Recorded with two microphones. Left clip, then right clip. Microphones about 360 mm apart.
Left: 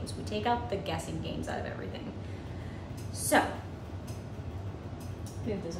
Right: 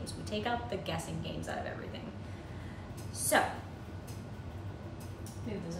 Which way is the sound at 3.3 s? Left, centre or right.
Centre.